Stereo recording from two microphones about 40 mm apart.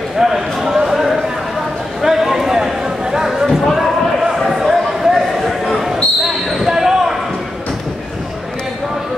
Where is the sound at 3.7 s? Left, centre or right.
Centre.